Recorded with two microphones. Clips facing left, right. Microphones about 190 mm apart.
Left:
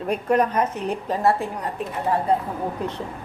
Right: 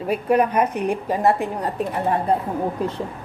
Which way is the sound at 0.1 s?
5° right (ahead or behind).